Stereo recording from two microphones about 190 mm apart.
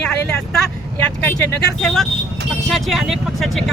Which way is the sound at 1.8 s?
5° left (ahead or behind).